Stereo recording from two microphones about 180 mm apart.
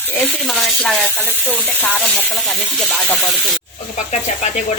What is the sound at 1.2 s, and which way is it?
Frying, 10° left (ahead or behind).